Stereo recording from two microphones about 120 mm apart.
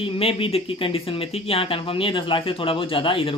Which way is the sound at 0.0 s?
50° left (ahead or behind).